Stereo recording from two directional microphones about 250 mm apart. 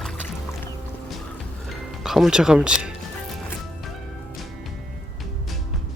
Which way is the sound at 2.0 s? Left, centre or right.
Centre.